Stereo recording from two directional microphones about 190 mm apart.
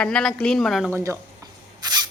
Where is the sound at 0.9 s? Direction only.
15° right (ahead or behind).